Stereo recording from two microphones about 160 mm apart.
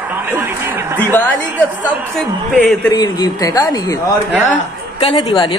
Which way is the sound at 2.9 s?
25° left (ahead or behind).